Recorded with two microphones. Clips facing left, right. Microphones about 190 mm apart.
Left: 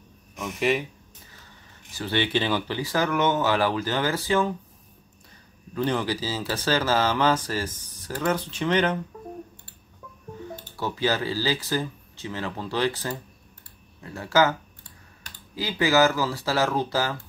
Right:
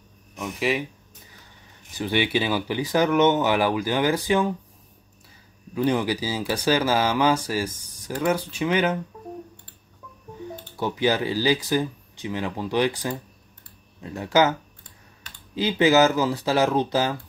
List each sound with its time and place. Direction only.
0.4 s speech: centre (ahead or behind)
2.0 s speech: 15° right (ahead or behind)
5.8 s speech: 10° right (ahead or behind)
10.8 s speech: 15° right (ahead or behind)
15.5 s speech: 20° right (ahead or behind)